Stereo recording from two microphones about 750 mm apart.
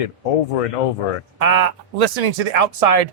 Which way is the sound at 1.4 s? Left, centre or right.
Right.